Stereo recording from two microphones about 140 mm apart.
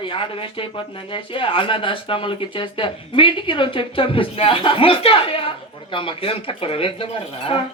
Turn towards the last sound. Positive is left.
turn(degrees=40)  # may be behind; listen again after turning